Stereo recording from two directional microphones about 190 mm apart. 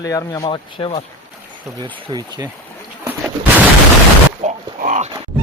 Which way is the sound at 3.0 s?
10° right (ahead or behind).